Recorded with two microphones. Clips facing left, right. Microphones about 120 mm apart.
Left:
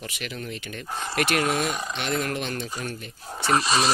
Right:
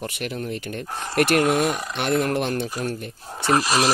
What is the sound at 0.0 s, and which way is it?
Speech, 50° right (ahead or behind).